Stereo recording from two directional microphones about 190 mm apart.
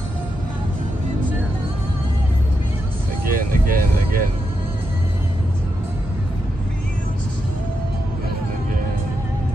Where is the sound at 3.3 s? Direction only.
50° right (ahead or behind).